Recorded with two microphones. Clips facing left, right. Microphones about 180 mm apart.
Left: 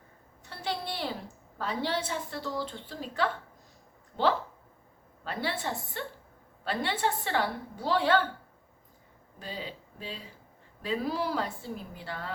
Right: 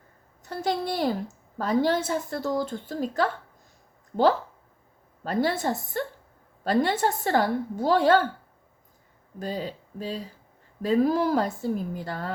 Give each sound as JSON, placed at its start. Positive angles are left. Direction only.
{"t": 0.4, "sound": "a woman's voice", "side_deg": -45}
{"t": 5.2, "sound": "a woman's voice", "side_deg": -40}
{"t": 9.4, "sound": "a woman's voice", "side_deg": -45}